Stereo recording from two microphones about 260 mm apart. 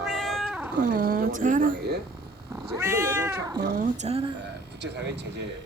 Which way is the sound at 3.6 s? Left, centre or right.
Right.